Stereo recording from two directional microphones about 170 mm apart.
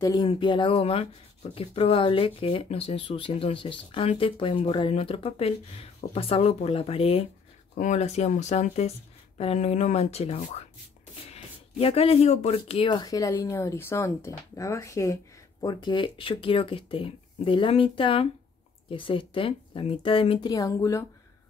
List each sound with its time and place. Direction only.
0.0 s speech: 25° left (ahead or behind)